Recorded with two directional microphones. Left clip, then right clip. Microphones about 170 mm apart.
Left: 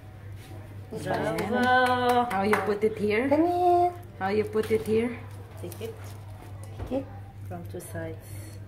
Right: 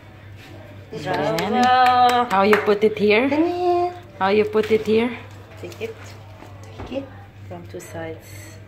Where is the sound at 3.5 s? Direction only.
30° left (ahead or behind).